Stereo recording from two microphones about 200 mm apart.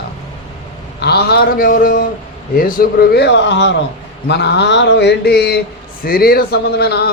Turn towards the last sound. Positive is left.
turn(degrees=55)  # may be behind; listen again after turning